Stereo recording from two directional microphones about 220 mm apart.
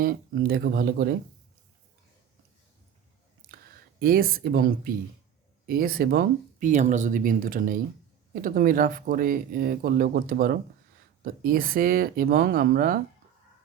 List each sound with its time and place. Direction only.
0.0 s speech: 40° right (ahead or behind)
4.0 s speech: 40° right (ahead or behind)